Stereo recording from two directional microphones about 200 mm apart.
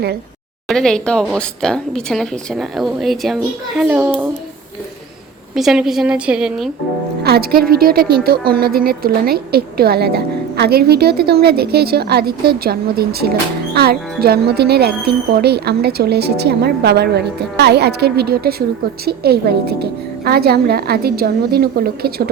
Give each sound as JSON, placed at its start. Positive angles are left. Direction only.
{"t": 0.7, "sound": "a child's voice", "side_deg": 0}
{"t": 5.5, "sound": "speech", "side_deg": 0}
{"t": 7.3, "sound": "a woman's voice", "side_deg": -50}